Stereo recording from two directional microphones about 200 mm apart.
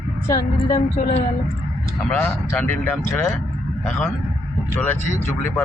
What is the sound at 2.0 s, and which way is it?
Speech, 10° left (ahead or behind).